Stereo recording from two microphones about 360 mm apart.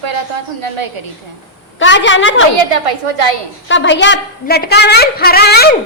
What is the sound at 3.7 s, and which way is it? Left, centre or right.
A woman's voice, left.